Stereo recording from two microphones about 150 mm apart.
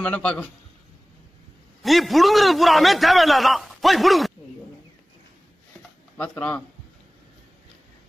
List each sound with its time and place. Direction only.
0.0 s a man's voice: 10° left (ahead or behind)
1.8 s a man's voice: centre (ahead or behind)
6.1 s a man's voice: 10° left (ahead or behind)